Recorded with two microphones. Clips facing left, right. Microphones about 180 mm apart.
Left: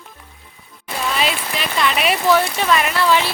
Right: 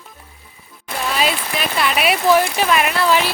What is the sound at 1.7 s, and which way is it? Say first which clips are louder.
Speech: even; 5° right (ahead or behind).